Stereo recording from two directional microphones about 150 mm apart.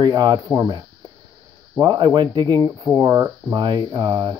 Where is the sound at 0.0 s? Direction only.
30° right (ahead or behind).